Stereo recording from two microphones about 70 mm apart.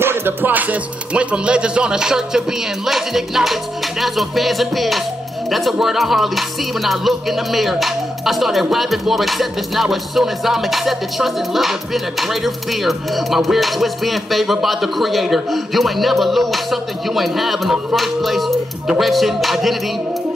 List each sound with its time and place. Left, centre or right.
0.0 s music: right; by 19.8 s centre